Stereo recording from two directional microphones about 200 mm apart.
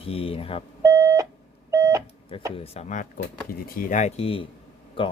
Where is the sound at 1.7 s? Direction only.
15° right (ahead or behind).